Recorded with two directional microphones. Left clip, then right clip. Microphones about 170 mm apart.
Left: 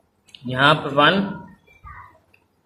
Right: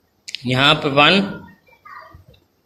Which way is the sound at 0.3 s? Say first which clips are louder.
Right 2 dB; 25° right (ahead or behind).